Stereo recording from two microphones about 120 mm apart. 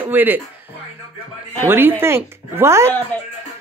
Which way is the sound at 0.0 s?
15° right (ahead or behind).